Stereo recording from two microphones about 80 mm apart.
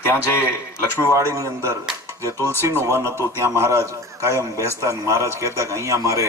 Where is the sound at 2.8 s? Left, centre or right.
Right.